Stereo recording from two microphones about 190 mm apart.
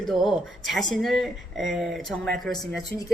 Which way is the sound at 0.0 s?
Centre (ahead or behind).